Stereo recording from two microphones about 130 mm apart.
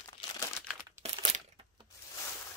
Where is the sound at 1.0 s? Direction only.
50° right (ahead or behind).